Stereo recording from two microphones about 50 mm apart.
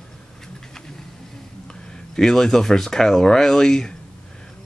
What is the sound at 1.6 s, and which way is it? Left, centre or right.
Speech, centre.